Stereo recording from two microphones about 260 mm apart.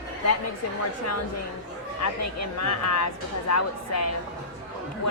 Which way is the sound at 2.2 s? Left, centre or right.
Left.